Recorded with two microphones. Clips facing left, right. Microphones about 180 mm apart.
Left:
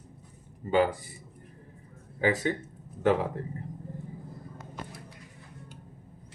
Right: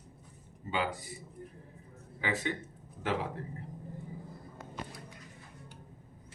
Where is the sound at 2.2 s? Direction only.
45° left (ahead or behind).